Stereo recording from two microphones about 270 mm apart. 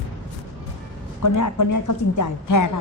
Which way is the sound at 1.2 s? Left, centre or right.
Left.